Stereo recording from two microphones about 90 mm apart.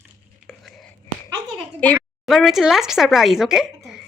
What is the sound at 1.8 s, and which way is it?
Speech, 15° left (ahead or behind).